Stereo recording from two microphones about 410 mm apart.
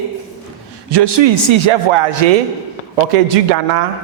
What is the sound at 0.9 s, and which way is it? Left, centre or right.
Speech, right.